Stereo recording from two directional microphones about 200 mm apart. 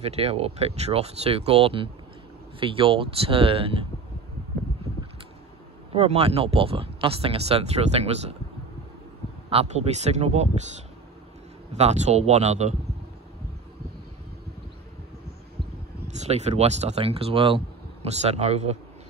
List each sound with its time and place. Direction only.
0.0 s speech: 30° right (ahead or behind)
5.9 s speech: 30° right (ahead or behind)
9.5 s speech: 30° right (ahead or behind)
11.7 s speech: 35° right (ahead or behind)
16.1 s speech: 35° right (ahead or behind)